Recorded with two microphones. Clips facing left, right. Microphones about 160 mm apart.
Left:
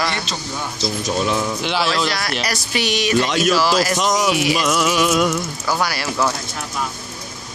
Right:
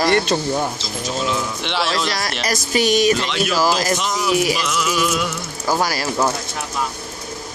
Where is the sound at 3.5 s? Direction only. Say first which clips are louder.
Even; 45° right (ahead or behind).